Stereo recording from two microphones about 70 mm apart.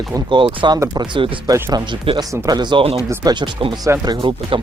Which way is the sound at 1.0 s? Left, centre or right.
Right.